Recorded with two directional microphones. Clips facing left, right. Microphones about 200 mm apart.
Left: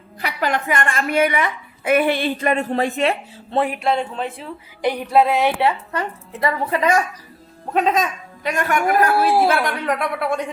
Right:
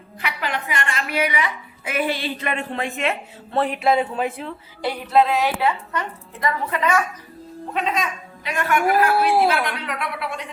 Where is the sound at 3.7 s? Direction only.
5° right (ahead or behind).